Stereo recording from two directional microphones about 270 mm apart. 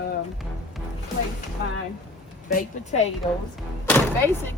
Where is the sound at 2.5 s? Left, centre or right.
Left.